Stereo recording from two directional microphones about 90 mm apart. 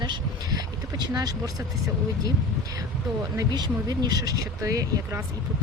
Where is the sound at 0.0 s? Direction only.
55° right (ahead or behind).